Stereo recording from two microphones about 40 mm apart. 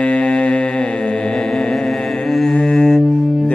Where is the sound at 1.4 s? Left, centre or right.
Centre.